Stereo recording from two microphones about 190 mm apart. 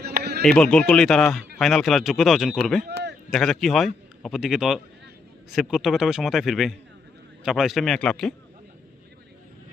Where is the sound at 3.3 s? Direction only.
Centre (ahead or behind).